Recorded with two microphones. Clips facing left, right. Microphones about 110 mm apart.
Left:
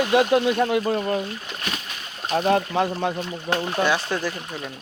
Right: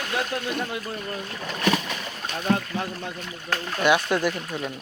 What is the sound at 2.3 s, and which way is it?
Speech, 70° left (ahead or behind).